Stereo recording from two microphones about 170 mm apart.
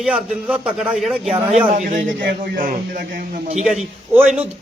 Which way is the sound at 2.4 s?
50° right (ahead or behind).